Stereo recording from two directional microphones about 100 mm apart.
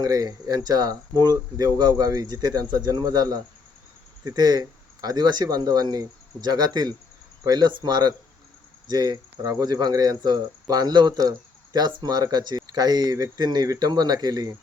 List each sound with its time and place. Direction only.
0.0 s speech: 35° right (ahead or behind)